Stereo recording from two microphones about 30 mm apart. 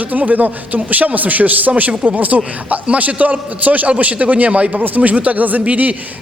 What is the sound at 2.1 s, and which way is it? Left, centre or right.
A man's voice, right.